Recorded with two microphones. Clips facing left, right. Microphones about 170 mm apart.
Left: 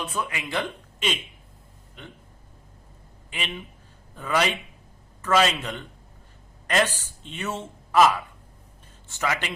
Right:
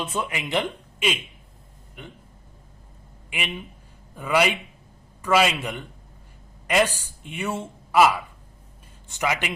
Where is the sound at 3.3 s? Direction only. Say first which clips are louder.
Right 2 dB; 10° right (ahead or behind).